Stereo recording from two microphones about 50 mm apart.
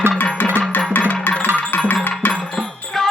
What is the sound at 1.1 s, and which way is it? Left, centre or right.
Music, left.